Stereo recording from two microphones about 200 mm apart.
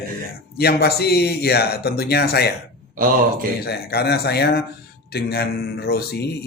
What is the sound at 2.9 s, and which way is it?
Speech, 45° right (ahead or behind).